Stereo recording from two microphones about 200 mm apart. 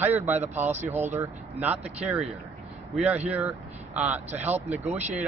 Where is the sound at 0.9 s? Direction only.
10° right (ahead or behind).